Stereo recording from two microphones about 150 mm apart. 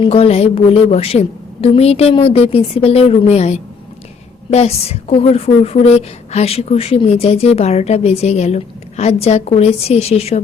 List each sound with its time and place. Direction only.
0.0 s a woman's voice: 40° left (ahead or behind)